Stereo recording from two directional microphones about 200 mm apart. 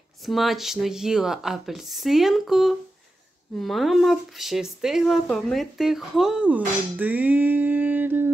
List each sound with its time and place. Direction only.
0.2 s speech: centre (ahead or behind)